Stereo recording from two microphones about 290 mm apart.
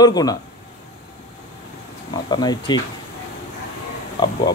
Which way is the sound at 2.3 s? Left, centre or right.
Centre.